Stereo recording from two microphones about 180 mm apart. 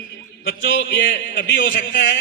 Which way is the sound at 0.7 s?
90° left.